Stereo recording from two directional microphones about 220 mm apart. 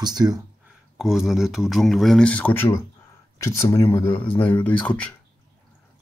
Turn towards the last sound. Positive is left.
turn(degrees=5)  # may be behind; listen again after turning